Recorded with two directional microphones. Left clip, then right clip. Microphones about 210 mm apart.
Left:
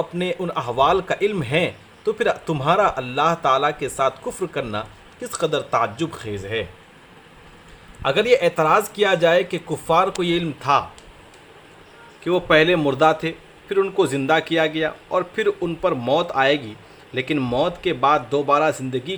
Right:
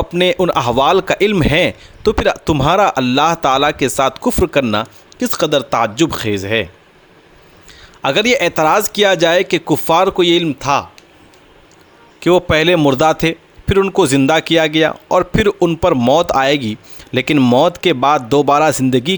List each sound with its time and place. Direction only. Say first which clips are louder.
0.1 s a man's voice: right 11 dB; 50° right (ahead or behind)
8.0 s a man's voice: right 4 dB; 50° right (ahead or behind)
12.2 s a man's voice: right 5 dB; 50° right (ahead or behind)